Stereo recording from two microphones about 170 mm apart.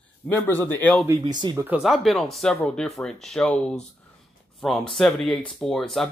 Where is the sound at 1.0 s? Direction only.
20° right (ahead or behind).